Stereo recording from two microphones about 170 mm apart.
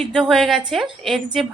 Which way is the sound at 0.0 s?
5° left (ahead or behind).